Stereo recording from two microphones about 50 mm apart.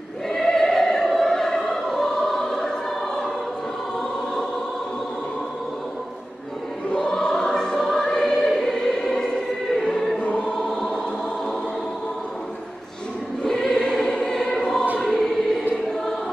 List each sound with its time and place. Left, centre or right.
0.3 s choir: centre
7.1 s choir: centre
10.2 s choir: left
10.5 s choir: centre
13.4 s choir: centre